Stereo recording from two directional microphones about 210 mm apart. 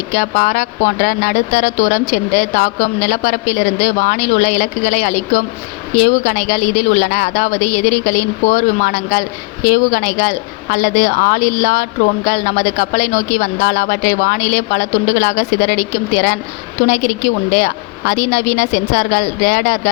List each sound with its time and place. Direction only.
0.1 s a woman's voice: 40° left (ahead or behind)
17.5 s a woman's voice: 40° left (ahead or behind)